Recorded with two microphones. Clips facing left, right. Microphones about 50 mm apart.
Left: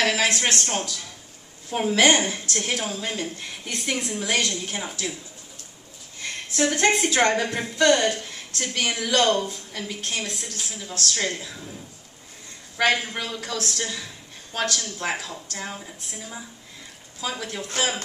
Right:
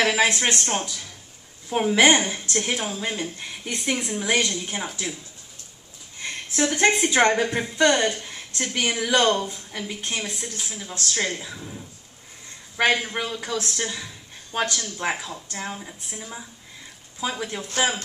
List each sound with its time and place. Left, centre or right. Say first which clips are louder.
0.0 s a woman's voice: right 2 dB; centre
2.0 s a woman's voice: right 1 dB; centre
6.1 s a sound: right 1 dB; right
6.6 s a woman's voice: even; centre
12.7 s a woman's voice: right 1 dB; centre
17.2 s a woman's voice: right 2 dB; centre